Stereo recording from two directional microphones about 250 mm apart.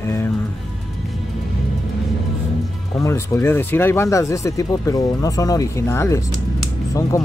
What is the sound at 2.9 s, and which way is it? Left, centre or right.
Speech, centre.